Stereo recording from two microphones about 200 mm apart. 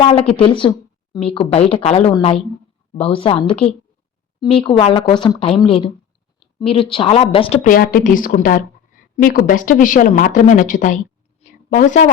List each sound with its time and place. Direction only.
0.0 s speech: 30° left (ahead or behind)